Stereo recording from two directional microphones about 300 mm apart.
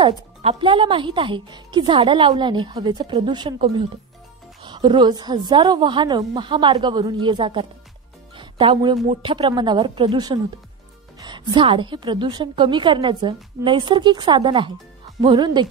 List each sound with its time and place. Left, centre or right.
0.0 s speech: centre